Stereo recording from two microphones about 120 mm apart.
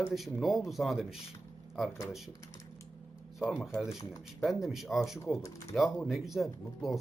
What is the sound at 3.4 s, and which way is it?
Speech, 5° right (ahead or behind).